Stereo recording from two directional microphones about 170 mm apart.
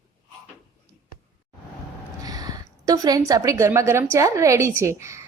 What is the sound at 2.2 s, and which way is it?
A woman's voice, 20° right (ahead or behind).